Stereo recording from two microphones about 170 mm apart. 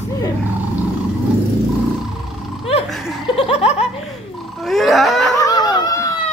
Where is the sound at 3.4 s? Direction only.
35° left (ahead or behind).